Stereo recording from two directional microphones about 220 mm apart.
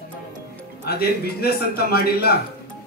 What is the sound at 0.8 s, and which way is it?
Speech, 45° left (ahead or behind).